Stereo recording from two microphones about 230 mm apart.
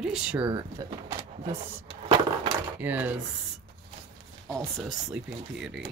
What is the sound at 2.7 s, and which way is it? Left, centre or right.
Speech, centre.